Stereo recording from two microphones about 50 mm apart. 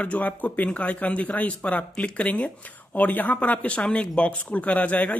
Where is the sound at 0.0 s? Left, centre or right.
Left.